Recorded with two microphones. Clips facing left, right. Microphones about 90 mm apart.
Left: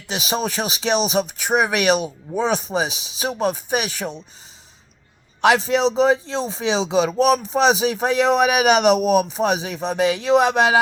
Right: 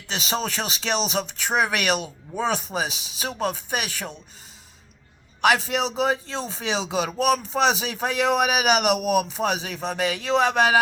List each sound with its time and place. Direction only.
0.1 s speech: 15° left (ahead or behind)
5.4 s speech: 25° left (ahead or behind)